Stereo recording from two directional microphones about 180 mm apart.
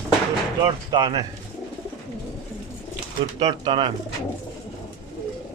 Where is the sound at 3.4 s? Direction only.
25° right (ahead or behind).